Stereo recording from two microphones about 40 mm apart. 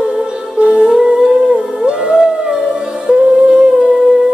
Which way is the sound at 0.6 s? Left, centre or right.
Right.